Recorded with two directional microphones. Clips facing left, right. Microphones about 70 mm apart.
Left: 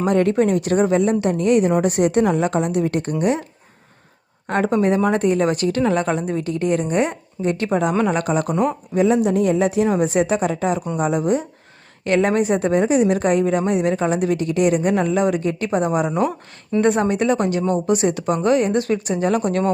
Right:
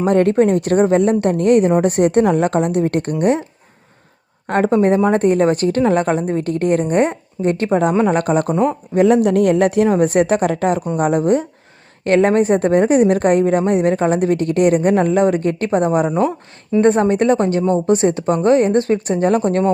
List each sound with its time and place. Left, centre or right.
0.1 s a woman's voice: right
4.4 s a woman's voice: right